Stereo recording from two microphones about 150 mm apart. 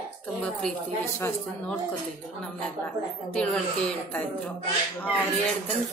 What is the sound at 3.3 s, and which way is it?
Speech, 5° left (ahead or behind).